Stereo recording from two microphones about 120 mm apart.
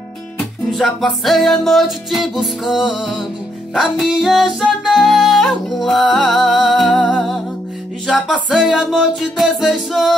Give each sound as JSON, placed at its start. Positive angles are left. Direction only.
{"t": 0.7, "sound": "music", "side_deg": 0}